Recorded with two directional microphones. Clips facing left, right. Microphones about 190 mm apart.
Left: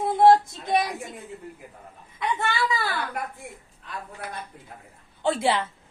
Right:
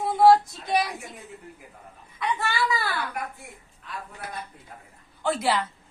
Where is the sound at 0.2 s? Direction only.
25° left (ahead or behind).